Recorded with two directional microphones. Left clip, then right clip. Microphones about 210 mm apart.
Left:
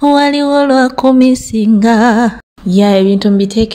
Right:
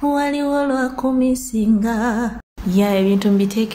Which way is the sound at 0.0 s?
40° left (ahead or behind).